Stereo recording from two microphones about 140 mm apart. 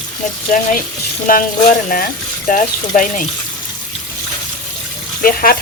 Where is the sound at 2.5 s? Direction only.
70° left (ahead or behind).